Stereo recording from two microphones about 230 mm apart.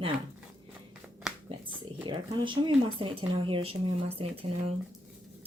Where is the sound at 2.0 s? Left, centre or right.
Right.